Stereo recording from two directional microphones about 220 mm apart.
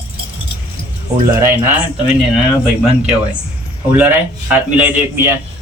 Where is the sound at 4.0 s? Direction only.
10° right (ahead or behind).